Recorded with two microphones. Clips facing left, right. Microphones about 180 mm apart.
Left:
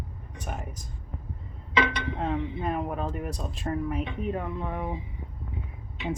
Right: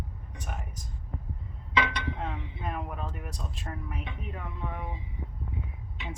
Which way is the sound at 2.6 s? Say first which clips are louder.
Left 6 dB; 35° left (ahead or behind).